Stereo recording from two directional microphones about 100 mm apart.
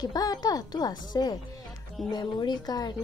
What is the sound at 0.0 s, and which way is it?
Speech, 40° left (ahead or behind).